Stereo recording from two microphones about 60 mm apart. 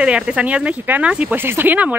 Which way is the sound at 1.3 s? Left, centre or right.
Right.